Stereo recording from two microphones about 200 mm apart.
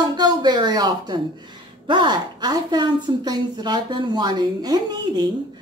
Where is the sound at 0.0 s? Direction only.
20° right (ahead or behind).